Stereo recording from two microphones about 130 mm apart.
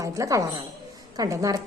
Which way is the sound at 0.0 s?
25° right (ahead or behind).